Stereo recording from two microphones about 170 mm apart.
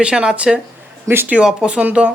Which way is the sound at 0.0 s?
5° right (ahead or behind).